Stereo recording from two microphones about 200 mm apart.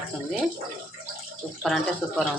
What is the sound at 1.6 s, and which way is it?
Speech, centre (ahead or behind).